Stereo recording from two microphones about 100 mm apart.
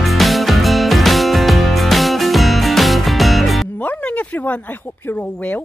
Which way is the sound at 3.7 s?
15° left (ahead or behind).